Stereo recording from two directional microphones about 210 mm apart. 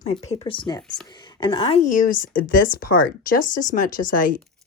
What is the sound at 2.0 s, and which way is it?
Speech, 40° left (ahead or behind).